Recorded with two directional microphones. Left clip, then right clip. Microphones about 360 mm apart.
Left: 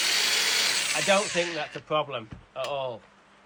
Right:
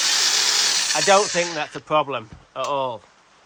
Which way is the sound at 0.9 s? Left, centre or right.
Right.